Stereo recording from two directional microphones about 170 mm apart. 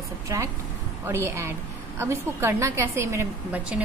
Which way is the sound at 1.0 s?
15° right (ahead or behind).